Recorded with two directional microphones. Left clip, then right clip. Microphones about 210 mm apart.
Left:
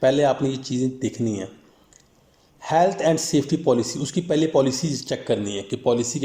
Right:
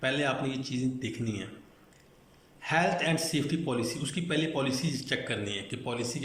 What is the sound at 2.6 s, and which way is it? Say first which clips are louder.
A man's voice: left 9 dB; 30° left (ahead or behind).